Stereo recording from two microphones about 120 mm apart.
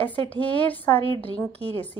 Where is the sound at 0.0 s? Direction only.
15° left (ahead or behind).